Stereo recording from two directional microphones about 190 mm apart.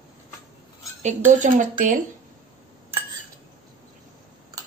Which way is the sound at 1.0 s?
40° right (ahead or behind).